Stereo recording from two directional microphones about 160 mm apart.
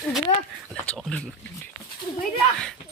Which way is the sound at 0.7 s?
5° left (ahead or behind).